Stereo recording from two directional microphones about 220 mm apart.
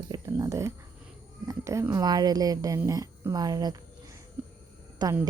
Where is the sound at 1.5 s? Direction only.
15° right (ahead or behind).